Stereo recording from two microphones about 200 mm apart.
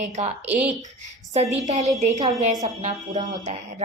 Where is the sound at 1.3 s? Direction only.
35° right (ahead or behind).